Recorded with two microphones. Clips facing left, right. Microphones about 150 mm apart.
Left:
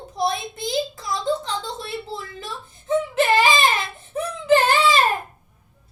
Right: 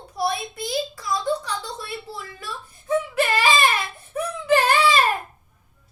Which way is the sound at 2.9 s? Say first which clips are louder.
Left 3 dB; 25° left (ahead or behind).